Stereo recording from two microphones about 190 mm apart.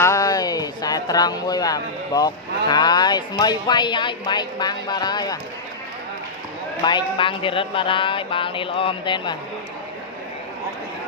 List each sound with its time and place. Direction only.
0.0 s speech: 15° left (ahead or behind)
6.8 s speech: 25° left (ahead or behind)